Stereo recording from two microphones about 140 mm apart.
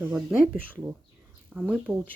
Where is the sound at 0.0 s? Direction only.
10° right (ahead or behind).